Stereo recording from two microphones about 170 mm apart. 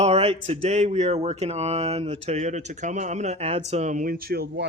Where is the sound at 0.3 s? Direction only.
35° right (ahead or behind).